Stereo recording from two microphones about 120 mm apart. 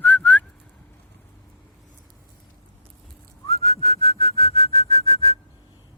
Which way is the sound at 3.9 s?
55° left (ahead or behind).